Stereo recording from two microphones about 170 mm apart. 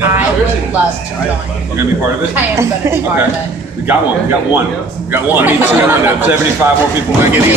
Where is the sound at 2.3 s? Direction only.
15° right (ahead or behind).